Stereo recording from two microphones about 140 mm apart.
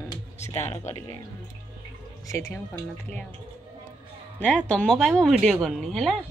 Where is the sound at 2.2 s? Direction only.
20° left (ahead or behind).